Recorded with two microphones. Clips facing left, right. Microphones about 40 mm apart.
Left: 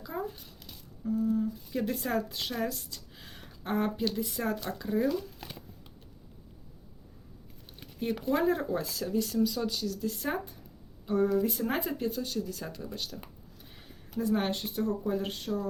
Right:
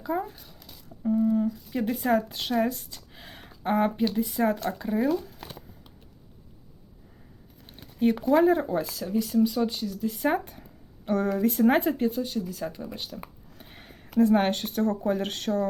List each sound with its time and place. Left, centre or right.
0.0 s speech: right
1.0 s a sound: right
1.7 s speech: right
8.4 s speech: right
8.8 s speech: centre
9.4 s speech: right
10.4 s speech: right
12.0 s speech: centre
12.7 s speech: right
13.6 s speech: right